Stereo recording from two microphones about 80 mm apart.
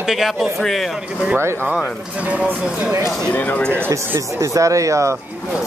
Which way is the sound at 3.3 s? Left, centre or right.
Left.